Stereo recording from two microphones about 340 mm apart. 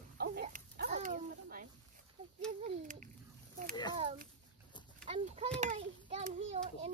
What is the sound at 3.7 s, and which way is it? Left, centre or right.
Speech, centre.